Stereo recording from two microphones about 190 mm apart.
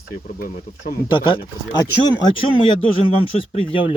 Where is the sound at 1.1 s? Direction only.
25° left (ahead or behind).